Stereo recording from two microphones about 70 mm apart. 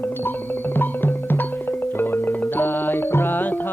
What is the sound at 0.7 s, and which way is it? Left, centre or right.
Music, left.